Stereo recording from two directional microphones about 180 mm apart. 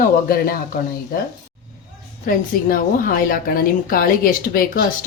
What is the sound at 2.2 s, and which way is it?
A woman's voice, 50° left (ahead or behind).